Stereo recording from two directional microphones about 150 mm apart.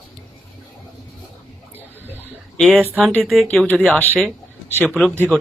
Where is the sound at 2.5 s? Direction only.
Centre (ahead or behind).